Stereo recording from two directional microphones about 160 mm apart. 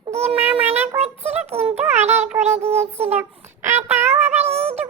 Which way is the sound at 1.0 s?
40° right (ahead or behind).